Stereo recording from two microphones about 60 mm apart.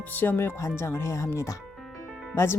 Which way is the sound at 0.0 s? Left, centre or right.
Left.